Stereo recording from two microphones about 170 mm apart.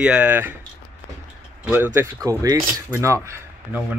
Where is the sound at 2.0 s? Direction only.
20° right (ahead or behind).